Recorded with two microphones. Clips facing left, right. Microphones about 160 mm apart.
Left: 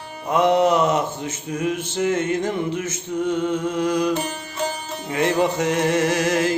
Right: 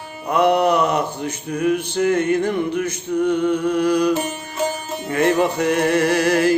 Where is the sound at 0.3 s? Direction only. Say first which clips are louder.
Right 1 dB; 20° left (ahead or behind).